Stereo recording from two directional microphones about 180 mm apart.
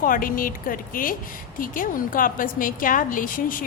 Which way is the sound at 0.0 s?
50° left (ahead or behind).